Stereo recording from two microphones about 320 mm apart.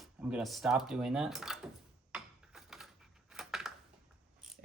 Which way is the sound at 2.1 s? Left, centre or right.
Centre.